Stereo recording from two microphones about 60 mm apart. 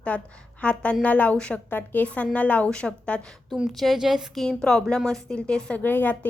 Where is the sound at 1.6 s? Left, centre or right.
Left.